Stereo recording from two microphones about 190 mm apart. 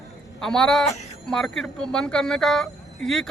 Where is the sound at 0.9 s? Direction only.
35° left (ahead or behind).